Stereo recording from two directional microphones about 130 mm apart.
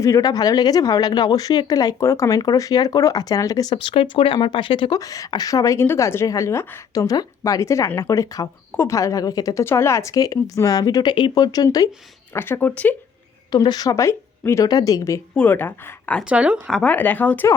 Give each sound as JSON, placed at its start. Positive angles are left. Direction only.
{"t": 0.0, "sound": "speech", "side_deg": 25}
{"t": 3.8, "sound": "speech", "side_deg": 40}
{"t": 4.9, "sound": "speech", "side_deg": 25}
{"t": 12.3, "sound": "speech", "side_deg": 15}
{"t": 13.5, "sound": "speech", "side_deg": 30}
{"t": 15.4, "sound": "speech", "side_deg": 15}
{"t": 16.3, "sound": "speech", "side_deg": -10}
{"t": 16.6, "sound": "speech", "side_deg": 5}